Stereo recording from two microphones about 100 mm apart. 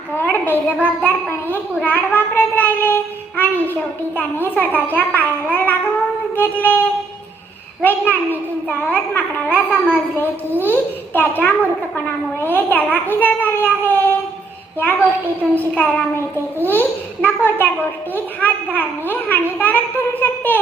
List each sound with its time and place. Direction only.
0.2 s child singing: 20° left (ahead or behind)
0.5 s a child's voice: 20° left (ahead or behind)
15.5 s a child's voice: 15° left (ahead or behind)